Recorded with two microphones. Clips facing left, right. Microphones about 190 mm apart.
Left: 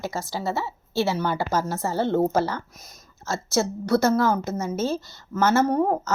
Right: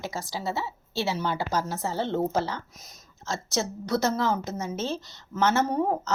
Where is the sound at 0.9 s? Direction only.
55° left (ahead or behind).